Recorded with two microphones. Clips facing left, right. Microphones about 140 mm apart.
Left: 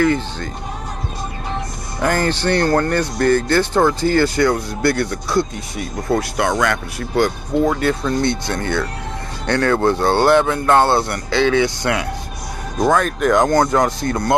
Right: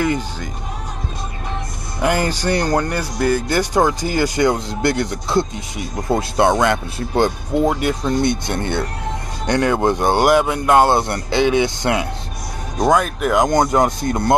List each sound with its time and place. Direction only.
0.0 s speech: 15° right (ahead or behind)
2.0 s speech: 10° right (ahead or behind)
12.8 s speech: 10° right (ahead or behind)